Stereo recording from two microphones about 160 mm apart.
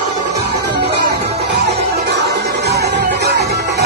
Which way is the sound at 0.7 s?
90° right.